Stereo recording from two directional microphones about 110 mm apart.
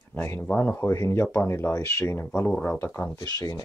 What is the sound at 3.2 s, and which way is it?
Speech, 35° left (ahead or behind).